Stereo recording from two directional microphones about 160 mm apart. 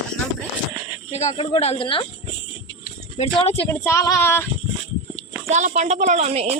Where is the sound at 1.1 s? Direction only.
40° left (ahead or behind).